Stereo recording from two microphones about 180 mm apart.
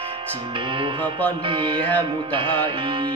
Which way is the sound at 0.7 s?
25° right (ahead or behind).